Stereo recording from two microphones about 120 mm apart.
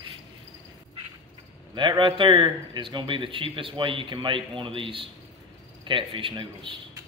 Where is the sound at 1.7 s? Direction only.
40° right (ahead or behind).